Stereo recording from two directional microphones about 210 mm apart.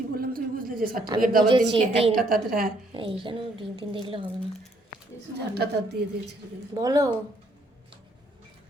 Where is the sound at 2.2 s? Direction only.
45° right (ahead or behind).